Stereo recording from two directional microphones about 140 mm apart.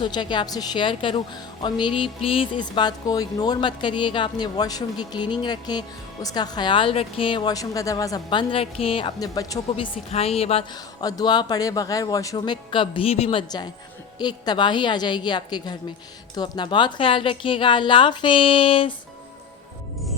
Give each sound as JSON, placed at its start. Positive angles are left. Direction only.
{"t": 0.0, "sound": "speech", "side_deg": 35}
{"t": 9.2, "sound": "speech", "side_deg": 25}
{"t": 9.7, "sound": "a woman's voice", "side_deg": 40}
{"t": 11.0, "sound": "speech", "side_deg": 30}
{"t": 12.7, "sound": "speech", "side_deg": 40}
{"t": 14.2, "sound": "speech", "side_deg": 30}